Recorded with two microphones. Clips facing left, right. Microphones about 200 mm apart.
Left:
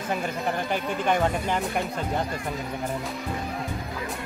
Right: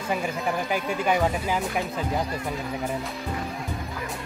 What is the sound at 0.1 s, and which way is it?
Speech, 5° right (ahead or behind).